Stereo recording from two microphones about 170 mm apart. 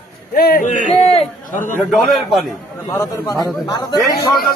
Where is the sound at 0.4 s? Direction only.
55° left (ahead or behind); by 1.2 s 40° left (ahead or behind).